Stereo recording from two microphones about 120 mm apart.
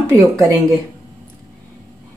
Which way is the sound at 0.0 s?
25° right (ahead or behind).